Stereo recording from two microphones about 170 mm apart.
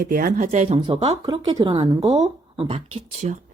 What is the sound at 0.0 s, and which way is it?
Speech, 55° right (ahead or behind).